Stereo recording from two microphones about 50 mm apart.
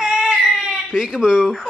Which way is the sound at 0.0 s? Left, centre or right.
Centre.